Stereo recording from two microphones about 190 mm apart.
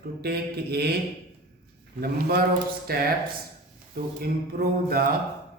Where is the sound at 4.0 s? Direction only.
55° right (ahead or behind).